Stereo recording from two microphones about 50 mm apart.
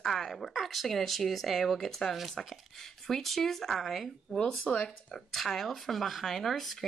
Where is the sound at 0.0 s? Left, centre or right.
Centre.